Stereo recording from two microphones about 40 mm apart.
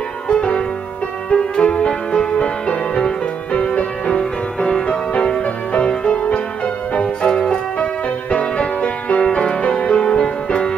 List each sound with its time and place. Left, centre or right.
0.3 s music: left